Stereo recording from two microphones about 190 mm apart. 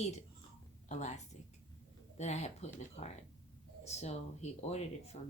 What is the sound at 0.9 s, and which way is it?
Speech, 40° left (ahead or behind).